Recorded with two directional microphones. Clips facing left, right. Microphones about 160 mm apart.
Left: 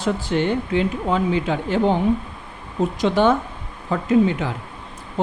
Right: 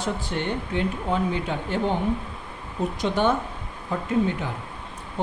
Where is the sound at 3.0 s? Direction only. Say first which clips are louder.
Left 5 dB; 90° left.